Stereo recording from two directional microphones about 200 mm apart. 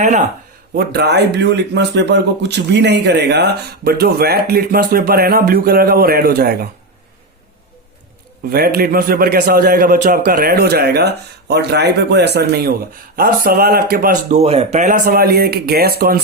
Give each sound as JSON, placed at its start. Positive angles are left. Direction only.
{"t": 0.0, "sound": "speech", "side_deg": -35}
{"t": 0.8, "sound": "speech", "side_deg": -55}
{"t": 8.4, "sound": "speech", "side_deg": -50}
{"t": 14.3, "sound": "speech", "side_deg": -30}